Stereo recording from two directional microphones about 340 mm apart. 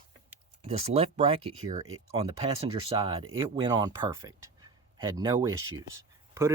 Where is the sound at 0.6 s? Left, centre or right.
Centre.